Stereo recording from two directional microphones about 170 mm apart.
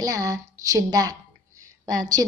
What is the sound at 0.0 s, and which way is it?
A woman's voice, 20° right (ahead or behind).